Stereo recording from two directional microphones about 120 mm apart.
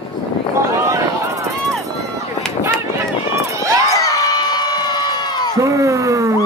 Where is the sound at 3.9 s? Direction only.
30° left (ahead or behind).